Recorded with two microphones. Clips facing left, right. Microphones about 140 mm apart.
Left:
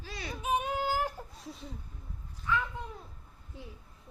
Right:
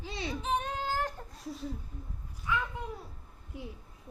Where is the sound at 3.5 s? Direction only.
15° right (ahead or behind).